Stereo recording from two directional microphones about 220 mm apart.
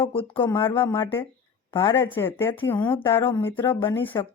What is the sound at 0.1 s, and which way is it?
Speech, 25° left (ahead or behind).